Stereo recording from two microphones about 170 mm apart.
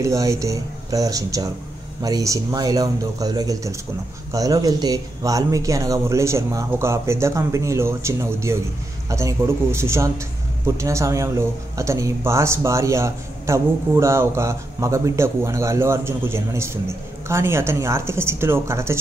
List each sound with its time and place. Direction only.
0.0 s speech: 20° right (ahead or behind)